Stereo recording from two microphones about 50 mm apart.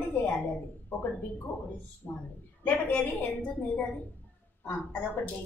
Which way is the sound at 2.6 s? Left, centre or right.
Left.